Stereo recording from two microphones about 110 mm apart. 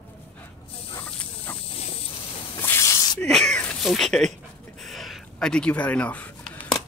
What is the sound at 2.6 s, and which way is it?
Snake, 20° left (ahead or behind).